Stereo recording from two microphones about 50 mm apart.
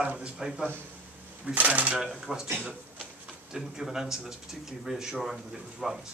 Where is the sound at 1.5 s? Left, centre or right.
Right.